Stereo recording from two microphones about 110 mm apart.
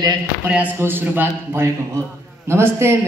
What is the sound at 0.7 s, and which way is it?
A woman's voice, 20° right (ahead or behind).